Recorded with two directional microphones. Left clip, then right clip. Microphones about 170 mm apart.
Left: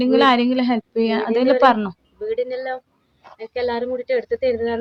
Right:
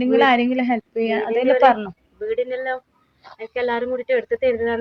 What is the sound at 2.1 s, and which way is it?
Speech, 5° left (ahead or behind).